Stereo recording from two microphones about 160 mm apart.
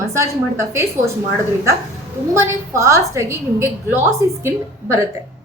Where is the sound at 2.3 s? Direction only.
15° right (ahead or behind).